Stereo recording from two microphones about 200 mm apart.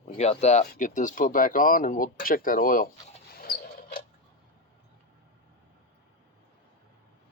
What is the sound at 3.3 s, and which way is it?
Dog, 50° left (ahead or behind).